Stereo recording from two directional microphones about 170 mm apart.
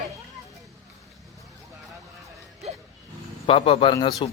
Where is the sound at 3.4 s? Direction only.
30° left (ahead or behind).